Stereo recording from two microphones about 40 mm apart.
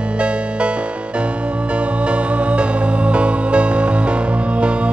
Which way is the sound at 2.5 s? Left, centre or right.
Right.